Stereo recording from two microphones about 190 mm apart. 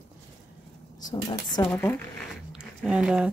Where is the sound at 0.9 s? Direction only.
20° left (ahead or behind).